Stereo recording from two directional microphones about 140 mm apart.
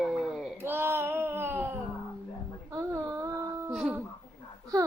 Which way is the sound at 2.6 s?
25° right (ahead or behind).